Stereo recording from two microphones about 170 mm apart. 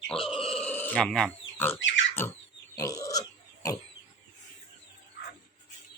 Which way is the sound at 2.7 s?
20° left (ahead or behind).